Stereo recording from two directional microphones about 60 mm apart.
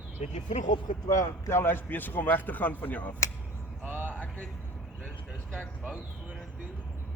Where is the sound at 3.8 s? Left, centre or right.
Right.